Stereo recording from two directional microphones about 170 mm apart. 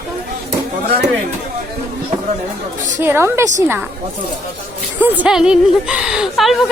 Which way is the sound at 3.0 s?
15° right (ahead or behind).